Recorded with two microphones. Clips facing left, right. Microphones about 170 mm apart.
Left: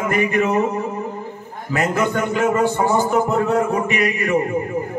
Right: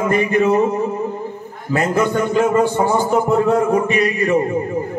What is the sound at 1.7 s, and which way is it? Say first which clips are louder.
A man's voice: right 3 dB; 30° right (ahead or behind).